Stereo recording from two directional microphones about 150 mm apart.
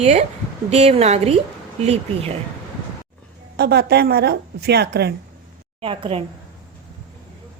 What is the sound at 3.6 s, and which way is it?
A woman's voice, 90° right.